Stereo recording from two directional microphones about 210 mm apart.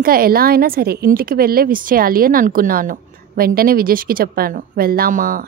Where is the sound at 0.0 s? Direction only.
45° right (ahead or behind).